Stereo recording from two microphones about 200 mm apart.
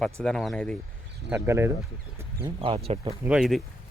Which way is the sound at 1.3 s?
10° right (ahead or behind).